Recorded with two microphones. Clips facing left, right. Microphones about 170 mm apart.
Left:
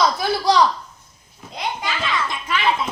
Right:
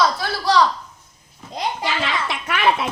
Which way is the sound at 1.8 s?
75° right (ahead or behind).